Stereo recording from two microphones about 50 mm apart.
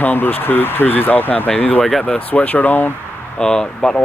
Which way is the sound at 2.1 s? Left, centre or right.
Left.